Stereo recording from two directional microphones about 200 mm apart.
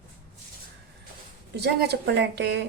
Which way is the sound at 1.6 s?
55° right (ahead or behind).